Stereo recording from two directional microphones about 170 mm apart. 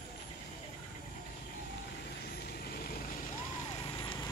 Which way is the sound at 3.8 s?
25° left (ahead or behind).